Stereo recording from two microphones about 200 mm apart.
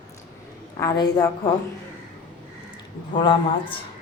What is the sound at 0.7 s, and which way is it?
Speech, 20° left (ahead or behind).